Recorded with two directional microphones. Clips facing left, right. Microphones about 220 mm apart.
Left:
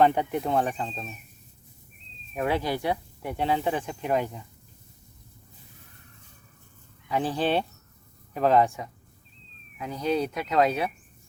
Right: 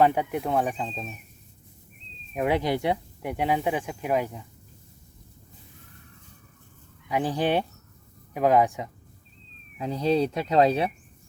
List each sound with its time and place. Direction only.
0.0 s speech: 5° right (ahead or behind)
2.3 s speech: 15° right (ahead or behind)
7.1 s speech: 15° right (ahead or behind)
9.7 s speech: 30° right (ahead or behind)